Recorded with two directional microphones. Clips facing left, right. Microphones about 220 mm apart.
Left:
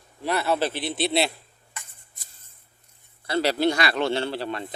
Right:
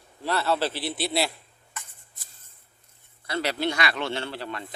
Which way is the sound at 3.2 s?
35° left (ahead or behind).